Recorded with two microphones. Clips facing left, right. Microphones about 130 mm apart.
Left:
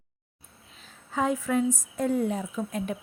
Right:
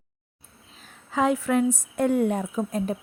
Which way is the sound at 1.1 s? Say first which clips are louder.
Right 4 dB; 85° right.